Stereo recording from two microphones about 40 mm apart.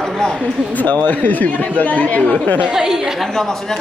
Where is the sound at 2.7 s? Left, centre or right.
Centre.